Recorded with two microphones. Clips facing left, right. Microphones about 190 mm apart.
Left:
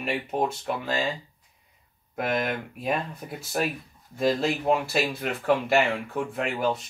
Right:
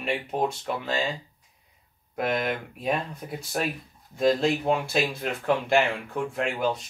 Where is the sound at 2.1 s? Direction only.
Centre (ahead or behind).